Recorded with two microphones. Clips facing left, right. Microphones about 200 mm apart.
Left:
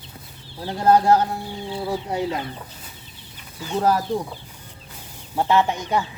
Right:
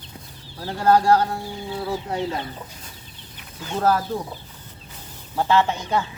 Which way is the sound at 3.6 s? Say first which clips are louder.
Even; 10° left (ahead or behind).